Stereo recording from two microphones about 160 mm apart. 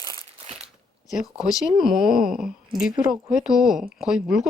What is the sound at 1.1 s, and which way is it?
Speech, 5° right (ahead or behind).